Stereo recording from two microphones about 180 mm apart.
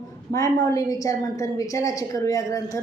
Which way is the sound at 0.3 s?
20° left (ahead or behind).